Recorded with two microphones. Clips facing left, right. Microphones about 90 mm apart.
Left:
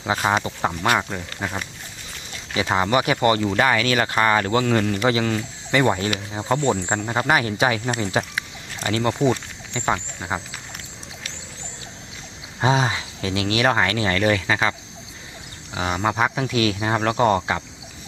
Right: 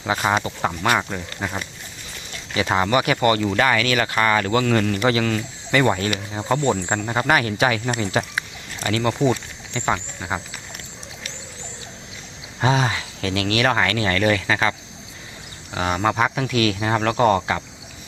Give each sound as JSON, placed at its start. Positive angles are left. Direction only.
{"t": 0.3, "sound": "speech", "side_deg": 15}
{"t": 0.8, "sound": "speech", "side_deg": 5}
{"t": 2.7, "sound": "speech", "side_deg": 20}
{"t": 9.1, "sound": "speech", "side_deg": 5}
{"t": 12.5, "sound": "speech", "side_deg": 20}